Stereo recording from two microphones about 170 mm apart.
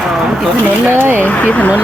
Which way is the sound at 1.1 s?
10° left (ahead or behind).